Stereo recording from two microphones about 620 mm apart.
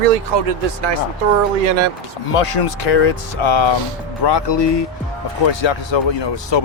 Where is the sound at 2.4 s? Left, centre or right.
Left.